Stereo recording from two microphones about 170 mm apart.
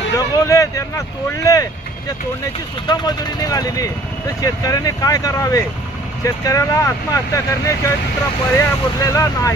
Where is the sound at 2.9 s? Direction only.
25° left (ahead or behind).